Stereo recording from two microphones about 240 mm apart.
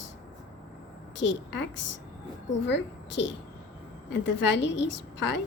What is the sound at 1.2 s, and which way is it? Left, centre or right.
A woman's voice, left.